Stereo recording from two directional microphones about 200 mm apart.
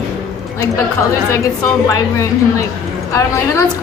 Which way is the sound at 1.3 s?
15° left (ahead or behind).